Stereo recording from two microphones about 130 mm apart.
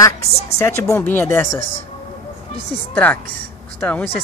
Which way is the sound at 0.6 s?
20° left (ahead or behind).